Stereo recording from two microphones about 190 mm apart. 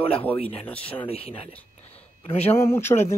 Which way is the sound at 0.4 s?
30° left (ahead or behind).